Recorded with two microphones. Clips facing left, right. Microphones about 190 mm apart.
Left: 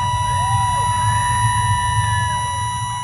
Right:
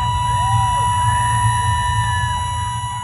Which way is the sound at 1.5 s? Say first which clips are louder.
Even; 45° right (ahead or behind).